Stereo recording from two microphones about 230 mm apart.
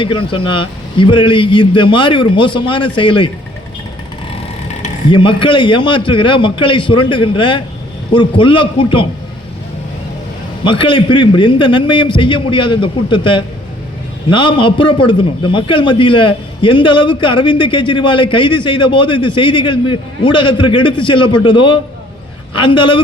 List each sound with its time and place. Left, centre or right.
0.0 s a man's voice: left
5.1 s a man's voice: left
10.6 s a man's voice: left